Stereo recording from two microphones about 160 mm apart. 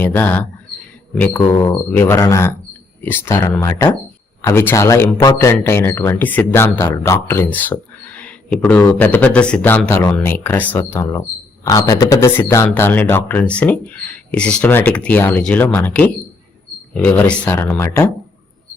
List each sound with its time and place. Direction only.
0.0 s speech: 10° left (ahead or behind)